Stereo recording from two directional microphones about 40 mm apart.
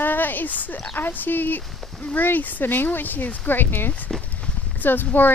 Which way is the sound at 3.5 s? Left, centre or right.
Left.